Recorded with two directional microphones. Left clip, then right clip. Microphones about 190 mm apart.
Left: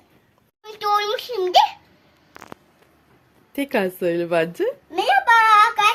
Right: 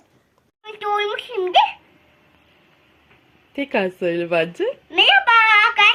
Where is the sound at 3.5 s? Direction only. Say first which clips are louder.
Right 1 dB; 5° left (ahead or behind).